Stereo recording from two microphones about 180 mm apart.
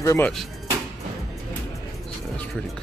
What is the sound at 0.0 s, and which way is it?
Speech, 15° left (ahead or behind).